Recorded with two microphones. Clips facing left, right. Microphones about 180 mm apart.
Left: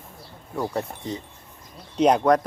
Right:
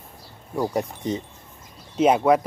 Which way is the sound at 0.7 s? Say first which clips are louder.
Right 4 dB; 15° right (ahead or behind).